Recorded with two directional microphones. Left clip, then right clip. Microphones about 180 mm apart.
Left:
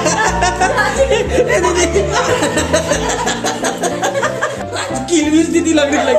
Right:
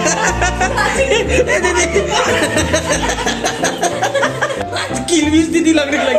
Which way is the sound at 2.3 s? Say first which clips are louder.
Even; 15° right (ahead or behind).